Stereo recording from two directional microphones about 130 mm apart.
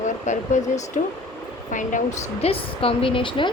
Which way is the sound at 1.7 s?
75° left (ahead or behind).